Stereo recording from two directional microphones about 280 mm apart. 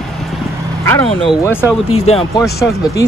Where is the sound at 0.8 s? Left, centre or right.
Centre.